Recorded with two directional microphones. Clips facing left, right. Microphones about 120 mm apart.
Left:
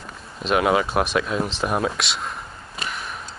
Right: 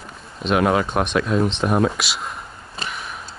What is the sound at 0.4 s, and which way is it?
Speech, centre (ahead or behind).